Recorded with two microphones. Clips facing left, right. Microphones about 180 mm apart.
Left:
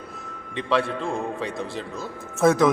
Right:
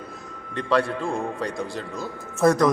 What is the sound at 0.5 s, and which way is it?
A man's voice, centre (ahead or behind).